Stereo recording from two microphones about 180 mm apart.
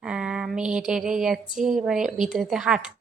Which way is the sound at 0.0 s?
5° right (ahead or behind).